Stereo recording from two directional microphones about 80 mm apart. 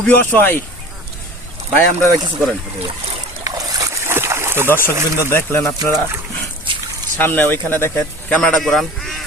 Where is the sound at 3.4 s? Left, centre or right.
Right.